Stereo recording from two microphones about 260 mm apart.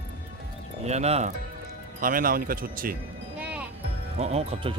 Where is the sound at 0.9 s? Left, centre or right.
Right.